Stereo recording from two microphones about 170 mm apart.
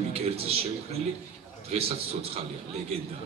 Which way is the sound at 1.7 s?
35° right (ahead or behind).